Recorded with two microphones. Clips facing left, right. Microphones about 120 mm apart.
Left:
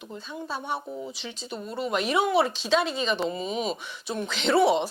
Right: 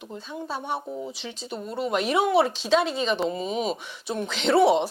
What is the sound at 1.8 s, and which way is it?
Speech, 50° right (ahead or behind).